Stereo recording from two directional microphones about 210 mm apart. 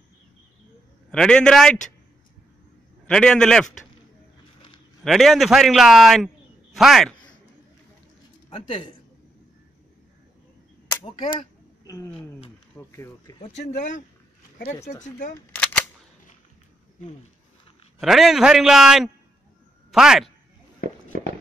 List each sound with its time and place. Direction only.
1.1 s a man's voice: 5° left (ahead or behind)
3.1 s a man's voice: 5° left (ahead or behind)
5.0 s a man's voice: centre (ahead or behind)
8.5 s a man's voice: 25° left (ahead or behind)
11.1 s speech: 20° left (ahead or behind)
13.4 s speech: 35° left (ahead or behind)
14.8 s speech: 15° left (ahead or behind)
15.0 s speech: 40° left (ahead or behind)
15.3 s cap gun: 5° left (ahead or behind)
18.0 s a man's voice: centre (ahead or behind)